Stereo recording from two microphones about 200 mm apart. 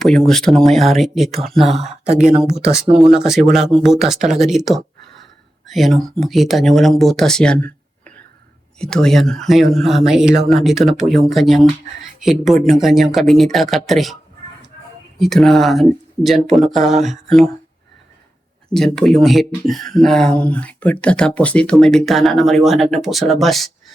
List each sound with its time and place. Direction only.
0.0 s speech: centre (ahead or behind)
1.8 s speech: 35° right (ahead or behind)
2.9 s speech: centre (ahead or behind)
8.8 s speech: 5° left (ahead or behind)
15.2 s speech: centre (ahead or behind)
18.7 s speech: centre (ahead or behind)